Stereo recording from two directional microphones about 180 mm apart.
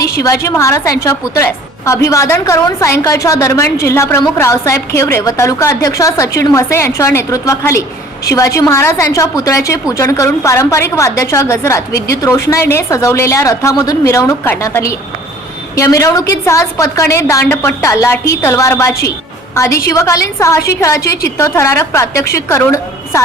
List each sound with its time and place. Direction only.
0.2 s a woman's voice: 15° left (ahead or behind)